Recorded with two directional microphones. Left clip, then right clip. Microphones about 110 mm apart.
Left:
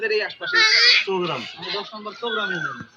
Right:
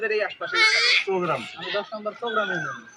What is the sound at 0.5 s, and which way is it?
Speech, 5° left (ahead or behind).